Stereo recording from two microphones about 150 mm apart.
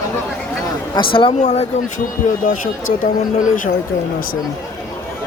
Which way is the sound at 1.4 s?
45° left (ahead or behind).